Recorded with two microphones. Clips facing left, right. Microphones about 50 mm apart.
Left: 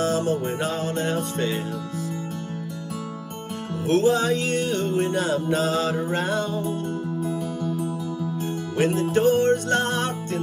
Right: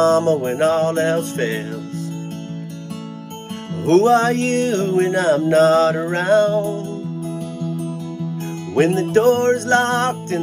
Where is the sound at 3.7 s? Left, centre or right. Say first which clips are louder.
Right 7 dB; right.